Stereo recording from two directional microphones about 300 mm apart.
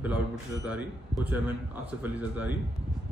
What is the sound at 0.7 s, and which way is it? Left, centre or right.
A man's voice, centre.